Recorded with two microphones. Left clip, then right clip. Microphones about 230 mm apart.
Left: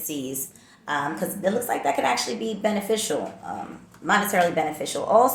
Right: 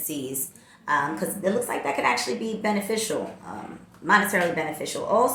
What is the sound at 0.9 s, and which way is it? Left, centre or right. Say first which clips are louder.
A woman's voice: right 2 dB; centre.